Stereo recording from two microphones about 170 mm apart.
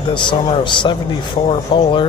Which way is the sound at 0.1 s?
30° left (ahead or behind).